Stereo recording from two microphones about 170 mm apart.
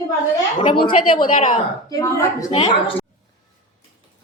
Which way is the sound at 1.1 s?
30° left (ahead or behind).